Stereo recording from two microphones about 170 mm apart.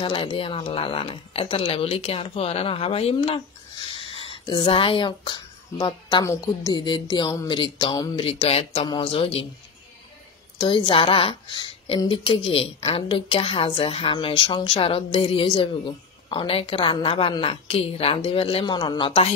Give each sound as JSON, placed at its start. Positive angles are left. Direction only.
{"t": 0.0, "sound": "a woman's voice", "side_deg": 30}
{"t": 8.3, "sound": "a woman's voice", "side_deg": 35}
{"t": 10.6, "sound": "a woman's voice", "side_deg": 30}